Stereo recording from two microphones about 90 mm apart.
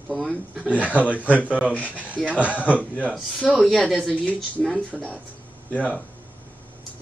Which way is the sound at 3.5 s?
5° right (ahead or behind).